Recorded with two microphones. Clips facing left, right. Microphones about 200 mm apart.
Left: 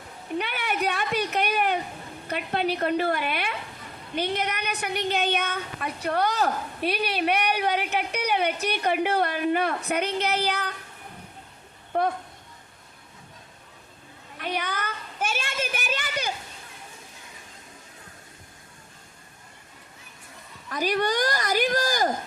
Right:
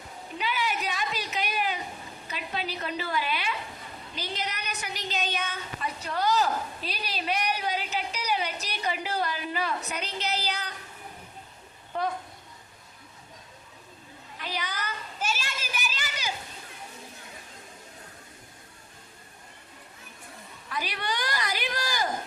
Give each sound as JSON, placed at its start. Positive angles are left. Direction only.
{"t": 0.3, "sound": "a sound", "side_deg": 60}
{"t": 2.2, "sound": "a woman's voice", "side_deg": 60}
{"t": 11.9, "sound": "a woman's voice", "side_deg": 55}
{"t": 14.3, "sound": "children playing", "side_deg": 60}
{"t": 20.7, "sound": "speech", "side_deg": 45}